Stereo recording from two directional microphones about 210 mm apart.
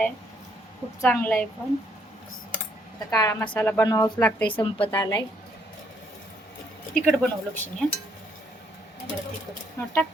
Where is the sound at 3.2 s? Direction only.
10° left (ahead or behind).